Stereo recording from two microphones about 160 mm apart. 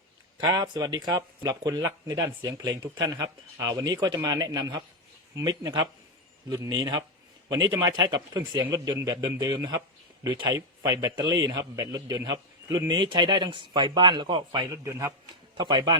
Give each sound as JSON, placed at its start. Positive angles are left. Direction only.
{"t": 0.3, "sound": "a man's voice", "side_deg": -25}